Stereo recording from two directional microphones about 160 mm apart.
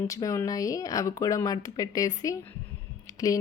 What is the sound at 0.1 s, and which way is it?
Speech, 20° left (ahead or behind).